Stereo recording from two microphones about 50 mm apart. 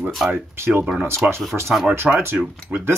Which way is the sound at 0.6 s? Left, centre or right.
Right.